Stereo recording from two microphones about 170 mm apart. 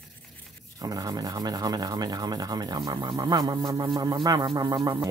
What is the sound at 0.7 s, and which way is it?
Speech, 20° right (ahead or behind).